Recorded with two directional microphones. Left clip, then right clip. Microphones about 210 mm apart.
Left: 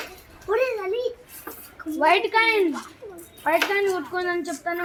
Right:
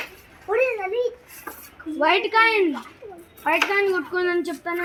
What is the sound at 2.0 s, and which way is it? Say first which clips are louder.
A woman's voice: right 1 dB; 50° right (ahead or behind).